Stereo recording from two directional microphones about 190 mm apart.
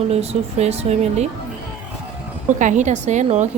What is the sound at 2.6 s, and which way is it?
Speech, 40° right (ahead or behind).